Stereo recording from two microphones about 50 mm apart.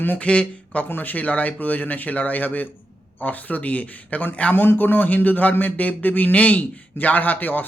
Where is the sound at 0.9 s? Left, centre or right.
Left.